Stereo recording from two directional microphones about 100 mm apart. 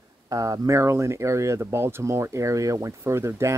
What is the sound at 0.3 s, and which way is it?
Speech, 35° right (ahead or behind).